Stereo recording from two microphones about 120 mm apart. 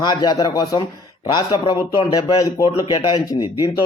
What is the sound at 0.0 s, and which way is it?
Speech, 35° left (ahead or behind).